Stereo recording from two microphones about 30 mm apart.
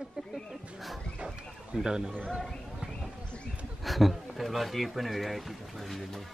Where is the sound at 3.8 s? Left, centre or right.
Centre.